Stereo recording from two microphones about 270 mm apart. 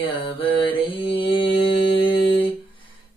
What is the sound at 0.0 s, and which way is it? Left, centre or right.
Mantra, centre.